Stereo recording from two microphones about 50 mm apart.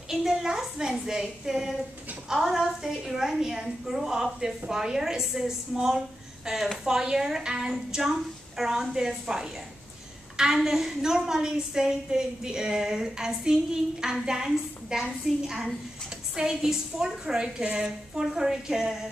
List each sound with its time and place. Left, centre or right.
0.1 s a woman's voice: centre